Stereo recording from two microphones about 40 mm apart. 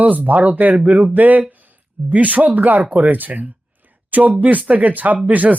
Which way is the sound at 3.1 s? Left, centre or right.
Right.